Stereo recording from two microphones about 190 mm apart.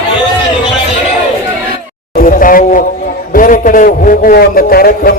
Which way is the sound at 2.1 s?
45° left (ahead or behind).